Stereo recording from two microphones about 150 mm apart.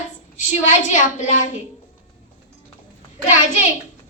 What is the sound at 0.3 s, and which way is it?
A child's voice, 55° left (ahead or behind).